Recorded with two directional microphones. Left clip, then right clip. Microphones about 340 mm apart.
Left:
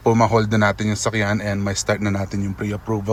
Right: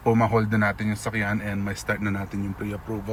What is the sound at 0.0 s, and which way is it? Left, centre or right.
A man's voice, centre.